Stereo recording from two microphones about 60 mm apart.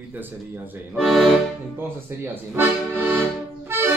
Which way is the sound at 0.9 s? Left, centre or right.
Centre.